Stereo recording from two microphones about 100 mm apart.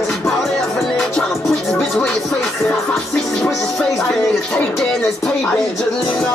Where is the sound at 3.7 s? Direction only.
Centre (ahead or behind).